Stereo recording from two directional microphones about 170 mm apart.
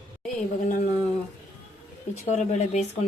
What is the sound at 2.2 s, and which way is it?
Speech, 40° left (ahead or behind).